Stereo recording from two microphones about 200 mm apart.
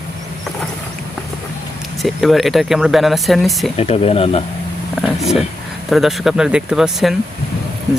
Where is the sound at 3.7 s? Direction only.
30° left (ahead or behind).